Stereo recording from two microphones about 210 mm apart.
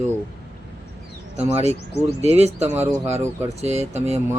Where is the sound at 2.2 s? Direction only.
30° right (ahead or behind).